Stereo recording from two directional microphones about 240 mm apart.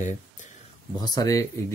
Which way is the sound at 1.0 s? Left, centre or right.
Centre.